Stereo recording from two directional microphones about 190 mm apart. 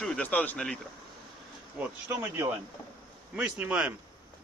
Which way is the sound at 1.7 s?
10° right (ahead or behind).